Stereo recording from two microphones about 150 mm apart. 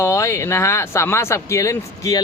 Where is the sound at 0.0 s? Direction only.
20° left (ahead or behind).